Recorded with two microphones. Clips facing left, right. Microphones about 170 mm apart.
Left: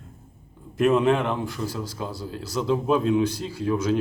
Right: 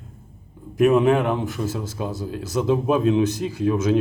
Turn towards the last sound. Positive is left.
turn(degrees=-20)  # may be behind; listen again after turning